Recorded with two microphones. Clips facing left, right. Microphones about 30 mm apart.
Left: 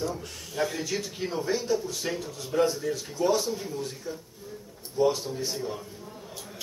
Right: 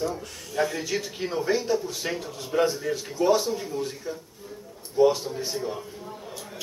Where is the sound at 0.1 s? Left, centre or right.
Centre.